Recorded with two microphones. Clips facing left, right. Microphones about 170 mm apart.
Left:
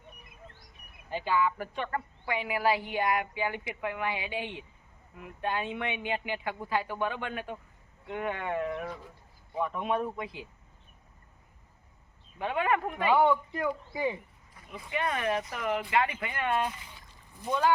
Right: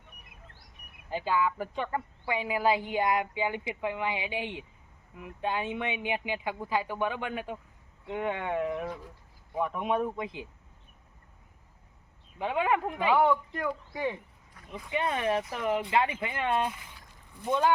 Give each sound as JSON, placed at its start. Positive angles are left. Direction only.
{"t": 1.1, "sound": "speech", "side_deg": -10}
{"t": 12.4, "sound": "speech", "side_deg": -15}
{"t": 13.1, "sound": "a man's voice", "side_deg": 0}
{"t": 14.8, "sound": "speech", "side_deg": -25}